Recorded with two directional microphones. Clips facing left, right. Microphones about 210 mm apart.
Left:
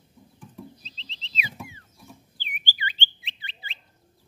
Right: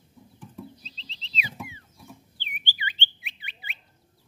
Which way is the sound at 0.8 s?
40° right (ahead or behind).